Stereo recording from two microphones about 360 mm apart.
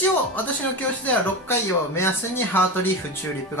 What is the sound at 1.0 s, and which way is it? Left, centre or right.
Speech, centre.